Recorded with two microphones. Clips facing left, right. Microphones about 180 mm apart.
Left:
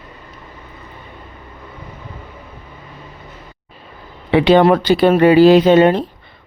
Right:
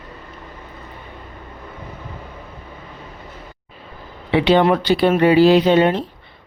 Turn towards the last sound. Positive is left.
turn(degrees=45)  # may be behind; listen again after turning